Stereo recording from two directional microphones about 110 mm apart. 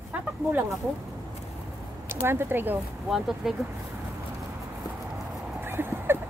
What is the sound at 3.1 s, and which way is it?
Speech, 5° right (ahead or behind).